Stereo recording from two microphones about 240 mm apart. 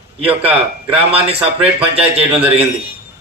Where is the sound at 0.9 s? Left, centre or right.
Right.